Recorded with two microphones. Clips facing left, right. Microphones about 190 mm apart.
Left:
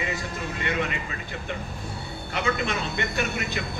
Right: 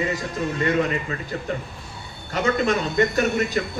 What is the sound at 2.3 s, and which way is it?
Speech, 45° right (ahead or behind).